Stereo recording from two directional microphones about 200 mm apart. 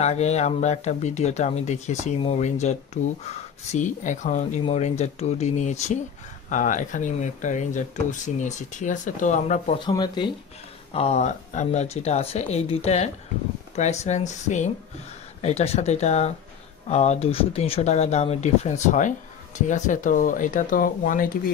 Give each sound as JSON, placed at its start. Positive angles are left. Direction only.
{"t": 0.0, "sound": "speech", "side_deg": 35}
{"t": 9.8, "sound": "speech", "side_deg": 20}